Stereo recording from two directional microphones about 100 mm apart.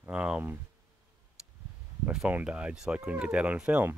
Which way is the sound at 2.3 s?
10° right (ahead or behind).